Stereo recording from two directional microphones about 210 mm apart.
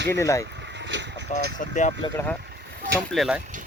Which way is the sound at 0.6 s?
55° right (ahead or behind).